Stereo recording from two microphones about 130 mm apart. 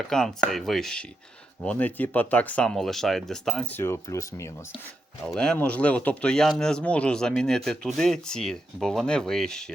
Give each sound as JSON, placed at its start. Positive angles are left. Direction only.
{"t": 0.1, "sound": "speech", "side_deg": 5}
{"t": 3.7, "sound": "speech", "side_deg": 20}
{"t": 5.3, "sound": "speech", "side_deg": 5}